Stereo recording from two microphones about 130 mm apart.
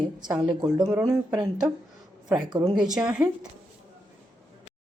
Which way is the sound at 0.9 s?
20° right (ahead or behind).